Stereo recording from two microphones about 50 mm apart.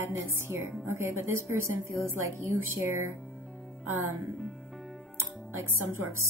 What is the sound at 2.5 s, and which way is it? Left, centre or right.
A woman's voice, right.